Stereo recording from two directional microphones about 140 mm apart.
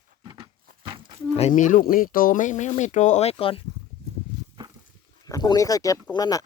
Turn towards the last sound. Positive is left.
turn(degrees=25)  # may be behind; listen again after turning